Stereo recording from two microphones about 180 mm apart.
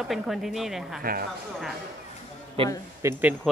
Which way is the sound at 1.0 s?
55° right (ahead or behind).